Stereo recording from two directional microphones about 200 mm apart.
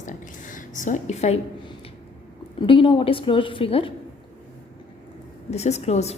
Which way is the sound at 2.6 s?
25° left (ahead or behind).